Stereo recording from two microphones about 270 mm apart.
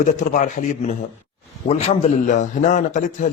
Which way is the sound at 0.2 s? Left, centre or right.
Left.